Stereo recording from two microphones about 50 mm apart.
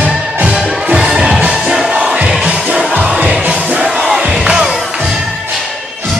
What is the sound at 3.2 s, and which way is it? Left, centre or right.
Music, right.